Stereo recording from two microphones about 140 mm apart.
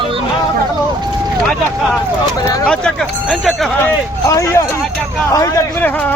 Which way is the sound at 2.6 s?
5° left (ahead or behind).